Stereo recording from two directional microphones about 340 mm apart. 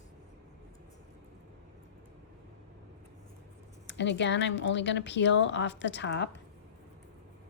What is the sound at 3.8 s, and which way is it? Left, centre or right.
Speech, left.